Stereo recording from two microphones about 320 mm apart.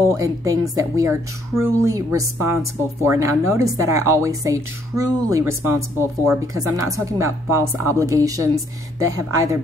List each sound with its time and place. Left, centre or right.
0.1 s speech: centre